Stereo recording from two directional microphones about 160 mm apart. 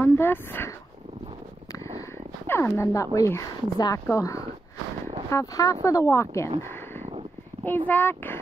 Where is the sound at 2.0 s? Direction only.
15° left (ahead or behind).